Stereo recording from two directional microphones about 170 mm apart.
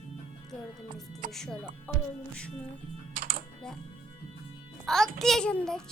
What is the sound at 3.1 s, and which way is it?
Typing, 55° right (ahead or behind).